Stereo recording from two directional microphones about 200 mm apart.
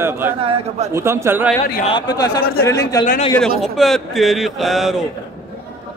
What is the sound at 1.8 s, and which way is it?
Speech, 20° left (ahead or behind).